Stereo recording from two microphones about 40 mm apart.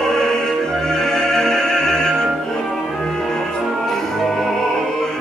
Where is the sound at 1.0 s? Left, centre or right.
Centre.